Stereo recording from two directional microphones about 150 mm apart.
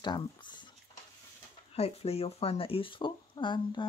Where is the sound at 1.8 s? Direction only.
45° left (ahead or behind).